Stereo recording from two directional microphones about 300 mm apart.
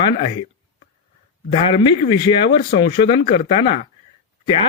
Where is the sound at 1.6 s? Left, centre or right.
Centre.